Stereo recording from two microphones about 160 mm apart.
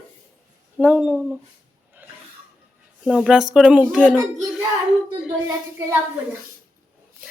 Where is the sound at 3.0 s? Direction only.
Centre (ahead or behind).